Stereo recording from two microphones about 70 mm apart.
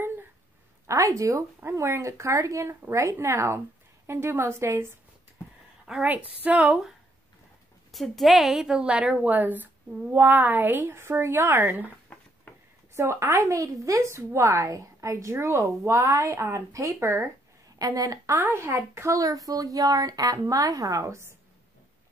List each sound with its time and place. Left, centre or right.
0.8 s a woman's voice: right
6.0 s a woman's voice: right
7.9 s a woman's voice: centre; by 11.9 s right
12.1 s a sound: centre
12.5 s a sound: left
12.9 s a woman's voice: right
17.7 s a woman's voice: right
18.4 s a woman's voice: right
19.1 s a woman's voice: right